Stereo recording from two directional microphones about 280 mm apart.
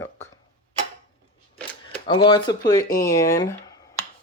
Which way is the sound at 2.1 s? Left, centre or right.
Centre.